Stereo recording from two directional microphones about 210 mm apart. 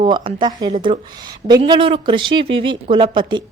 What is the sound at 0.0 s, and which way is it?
A woman's voice, 25° right (ahead or behind).